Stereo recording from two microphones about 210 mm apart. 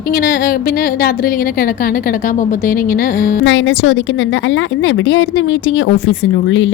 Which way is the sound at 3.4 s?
65° left (ahead or behind).